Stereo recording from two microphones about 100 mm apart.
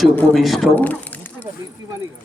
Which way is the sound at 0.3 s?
Centre (ahead or behind).